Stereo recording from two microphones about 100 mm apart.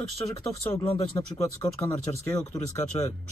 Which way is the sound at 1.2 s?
40° left (ahead or behind).